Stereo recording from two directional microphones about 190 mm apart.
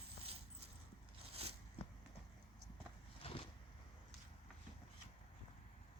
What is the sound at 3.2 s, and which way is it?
Vehicle, 30° left (ahead or behind).